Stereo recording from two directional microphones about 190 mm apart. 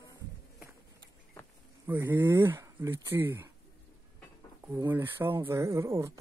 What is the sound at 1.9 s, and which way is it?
Speech, 10° right (ahead or behind).